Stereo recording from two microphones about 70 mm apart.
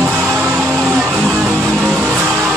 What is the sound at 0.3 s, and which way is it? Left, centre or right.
Music, right.